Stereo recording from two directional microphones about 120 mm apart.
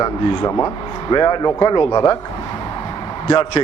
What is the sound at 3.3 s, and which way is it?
Speech, 45° left (ahead or behind).